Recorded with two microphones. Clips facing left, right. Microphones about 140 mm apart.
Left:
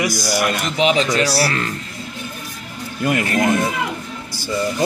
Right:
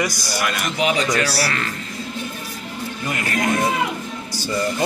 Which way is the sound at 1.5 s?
40° left (ahead or behind).